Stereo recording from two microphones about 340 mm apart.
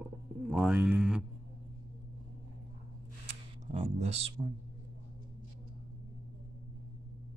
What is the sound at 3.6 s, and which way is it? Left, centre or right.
Music, centre.